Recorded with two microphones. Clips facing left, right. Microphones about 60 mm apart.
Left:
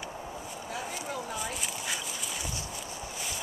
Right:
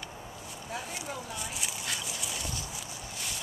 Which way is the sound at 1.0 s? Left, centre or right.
Centre.